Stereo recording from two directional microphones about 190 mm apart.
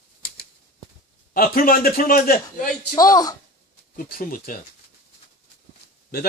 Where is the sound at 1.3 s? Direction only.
50° left (ahead or behind).